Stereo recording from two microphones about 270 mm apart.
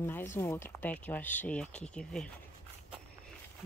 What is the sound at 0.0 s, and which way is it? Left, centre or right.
Speech, centre.